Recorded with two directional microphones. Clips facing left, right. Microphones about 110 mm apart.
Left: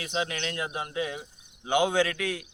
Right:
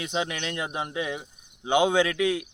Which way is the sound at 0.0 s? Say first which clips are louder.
Right 2 dB; 25° right (ahead or behind).